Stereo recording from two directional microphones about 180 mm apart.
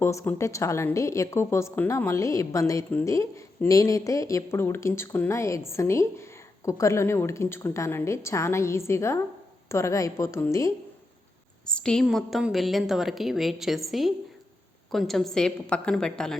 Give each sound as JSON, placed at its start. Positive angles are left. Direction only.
{"t": 0.0, "sound": "a woman's voice", "side_deg": 15}
{"t": 11.6, "sound": "a woman's voice", "side_deg": 5}